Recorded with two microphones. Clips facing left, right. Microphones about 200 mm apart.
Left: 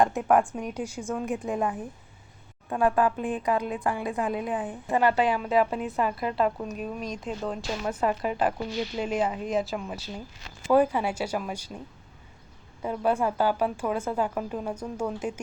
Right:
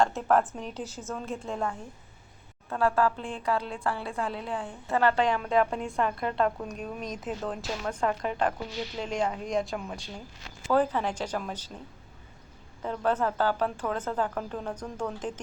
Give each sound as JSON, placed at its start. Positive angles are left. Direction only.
{"t": 0.0, "sound": "a woman's voice", "side_deg": 15}
{"t": 12.8, "sound": "a woman's voice", "side_deg": 10}